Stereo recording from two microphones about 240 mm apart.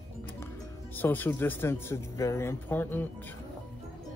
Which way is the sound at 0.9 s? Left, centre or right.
Centre.